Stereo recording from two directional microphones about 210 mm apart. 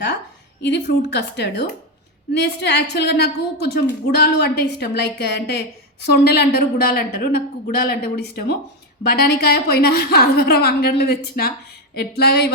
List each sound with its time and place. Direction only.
0.6 s a woman's voice: 55° left (ahead or behind)